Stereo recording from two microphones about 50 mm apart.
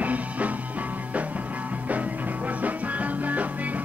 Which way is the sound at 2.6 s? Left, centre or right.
Right.